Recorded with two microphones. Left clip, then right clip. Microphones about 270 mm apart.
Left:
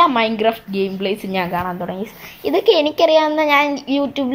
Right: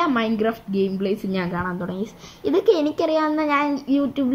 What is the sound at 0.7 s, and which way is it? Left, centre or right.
Speech, left.